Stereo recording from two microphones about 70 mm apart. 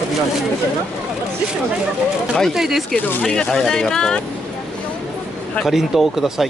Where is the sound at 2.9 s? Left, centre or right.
Left.